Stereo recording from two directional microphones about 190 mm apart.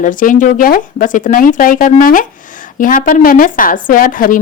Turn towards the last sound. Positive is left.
turn(degrees=45)  # may be behind; listen again after turning